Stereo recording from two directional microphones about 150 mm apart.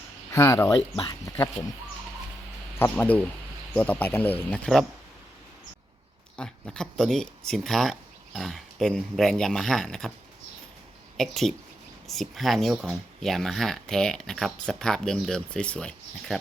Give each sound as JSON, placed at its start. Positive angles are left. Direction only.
{"t": 0.3, "sound": "speech", "side_deg": 20}
{"t": 2.7, "sound": "speech", "side_deg": 15}
{"t": 6.3, "sound": "speech", "side_deg": 5}
{"t": 11.2, "sound": "speech", "side_deg": 0}